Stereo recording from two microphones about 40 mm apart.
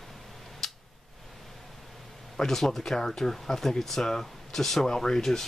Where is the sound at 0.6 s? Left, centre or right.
Centre.